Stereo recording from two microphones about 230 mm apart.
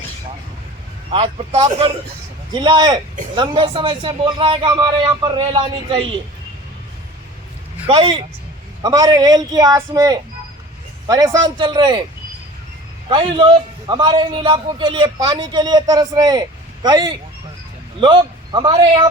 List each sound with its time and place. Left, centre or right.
1.1 s a man's voice: right
7.9 s a man's voice: right
13.1 s a man's voice: right